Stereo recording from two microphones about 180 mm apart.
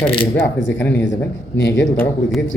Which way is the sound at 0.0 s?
30° left (ahead or behind).